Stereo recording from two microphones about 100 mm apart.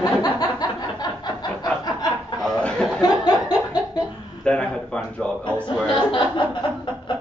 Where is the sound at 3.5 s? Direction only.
40° left (ahead or behind).